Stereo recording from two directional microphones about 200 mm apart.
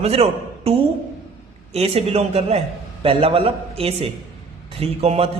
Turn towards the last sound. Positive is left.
turn(degrees=-30)  # may be behind; listen again after turning